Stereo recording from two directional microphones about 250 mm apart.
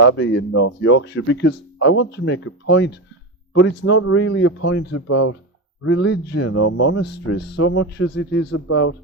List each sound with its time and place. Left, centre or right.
0.2 s speech: left
5.8 s speech: left
6.5 s speech: left
6.7 s speech: left
8.4 s speech: left